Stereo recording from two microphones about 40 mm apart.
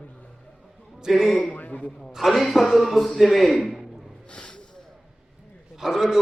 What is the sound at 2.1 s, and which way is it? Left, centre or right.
A man's voice, centre.